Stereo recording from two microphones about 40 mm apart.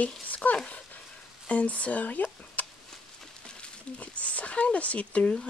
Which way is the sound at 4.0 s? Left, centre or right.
Left.